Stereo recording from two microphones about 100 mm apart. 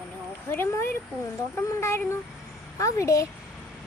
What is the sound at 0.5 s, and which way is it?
Speech, 25° left (ahead or behind).